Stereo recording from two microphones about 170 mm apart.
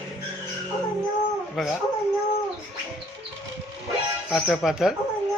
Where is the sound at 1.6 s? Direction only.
Centre (ahead or behind).